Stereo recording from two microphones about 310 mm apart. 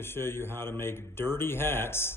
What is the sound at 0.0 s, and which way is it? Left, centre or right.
Speech, centre.